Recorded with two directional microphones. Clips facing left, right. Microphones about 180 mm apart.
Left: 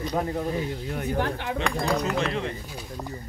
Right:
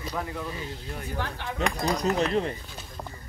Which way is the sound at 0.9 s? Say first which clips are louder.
Left 7 dB; 55° left (ahead or behind).